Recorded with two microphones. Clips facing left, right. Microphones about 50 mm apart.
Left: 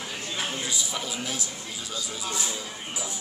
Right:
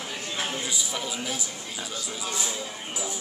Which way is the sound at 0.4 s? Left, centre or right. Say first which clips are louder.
Even; centre.